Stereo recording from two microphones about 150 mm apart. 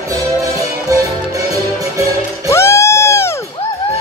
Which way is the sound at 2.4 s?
20° left (ahead or behind).